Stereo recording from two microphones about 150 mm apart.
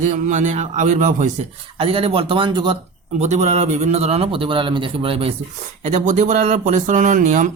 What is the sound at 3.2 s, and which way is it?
Speech, 50° right (ahead or behind).